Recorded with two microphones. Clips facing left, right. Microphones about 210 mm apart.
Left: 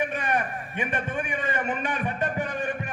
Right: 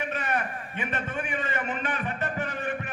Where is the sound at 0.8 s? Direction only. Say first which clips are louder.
Left 3 dB; 15° left (ahead or behind).